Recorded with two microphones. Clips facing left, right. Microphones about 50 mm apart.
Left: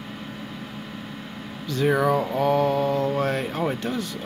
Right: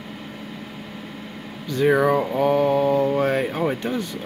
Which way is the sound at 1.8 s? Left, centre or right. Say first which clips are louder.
Right 3 dB; centre.